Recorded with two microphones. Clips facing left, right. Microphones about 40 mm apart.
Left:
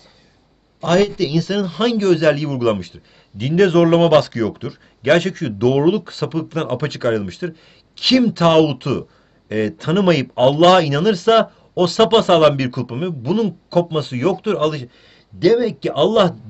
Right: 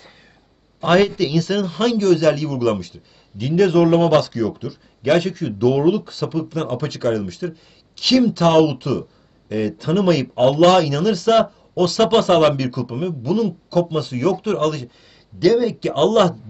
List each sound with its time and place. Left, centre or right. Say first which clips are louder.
0.7 s a man's voice: even; centre
2.0 s a man's voice: left 1 dB; left
14.6 s speech: left 1 dB; centre